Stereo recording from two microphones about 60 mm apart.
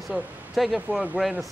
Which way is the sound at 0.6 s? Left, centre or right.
Centre.